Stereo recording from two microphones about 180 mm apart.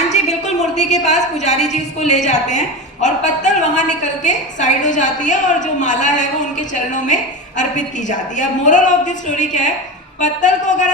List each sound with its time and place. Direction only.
0.1 s a woman's voice: 40° left (ahead or behind)